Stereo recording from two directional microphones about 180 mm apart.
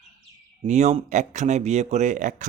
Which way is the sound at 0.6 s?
40° right (ahead or behind).